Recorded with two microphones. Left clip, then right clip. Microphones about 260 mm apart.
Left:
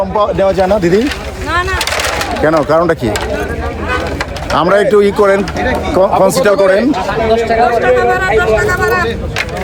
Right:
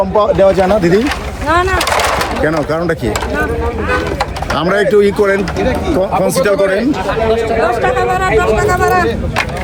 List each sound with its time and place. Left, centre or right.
0.2 s speech: centre
1.0 s speech: centre
2.4 s speech: centre
4.5 s speech: centre
7.9 s speech: centre